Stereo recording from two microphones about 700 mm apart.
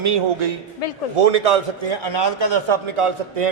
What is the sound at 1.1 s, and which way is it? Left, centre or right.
A man's voice, right.